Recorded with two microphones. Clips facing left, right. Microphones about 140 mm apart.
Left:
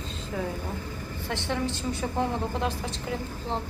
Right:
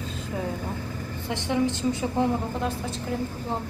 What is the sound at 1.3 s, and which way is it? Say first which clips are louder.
Speech: right 5 dB; 15° right (ahead or behind).